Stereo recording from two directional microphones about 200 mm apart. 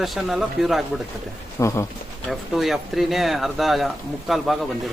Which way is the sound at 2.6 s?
Centre (ahead or behind).